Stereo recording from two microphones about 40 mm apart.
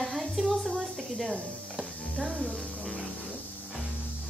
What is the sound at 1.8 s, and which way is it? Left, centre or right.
Music, centre.